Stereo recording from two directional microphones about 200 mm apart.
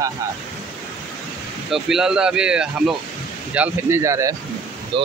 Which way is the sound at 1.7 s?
Centre (ahead or behind).